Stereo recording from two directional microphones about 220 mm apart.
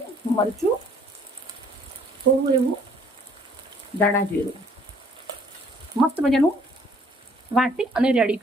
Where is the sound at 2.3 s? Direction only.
55° right (ahead or behind).